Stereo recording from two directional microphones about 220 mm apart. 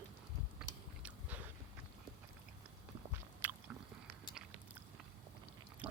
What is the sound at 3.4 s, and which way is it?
Biting, 10° right (ahead or behind).